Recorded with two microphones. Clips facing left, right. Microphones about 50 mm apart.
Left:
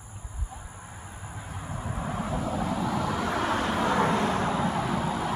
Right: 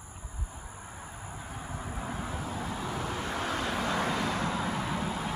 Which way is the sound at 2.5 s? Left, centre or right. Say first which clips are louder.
Left 8 dB; left.